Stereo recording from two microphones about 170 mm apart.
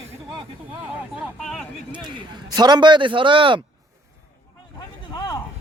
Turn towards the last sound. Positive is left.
turn(degrees=25)  # may be behind; listen again after turning